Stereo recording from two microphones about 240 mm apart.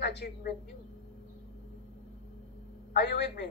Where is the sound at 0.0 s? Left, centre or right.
Left.